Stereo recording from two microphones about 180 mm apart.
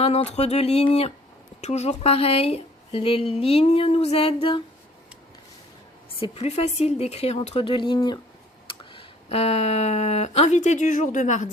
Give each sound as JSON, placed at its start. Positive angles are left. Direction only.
{"t": 0.0, "sound": "speech", "side_deg": 35}
{"t": 6.1, "sound": "speech", "side_deg": 35}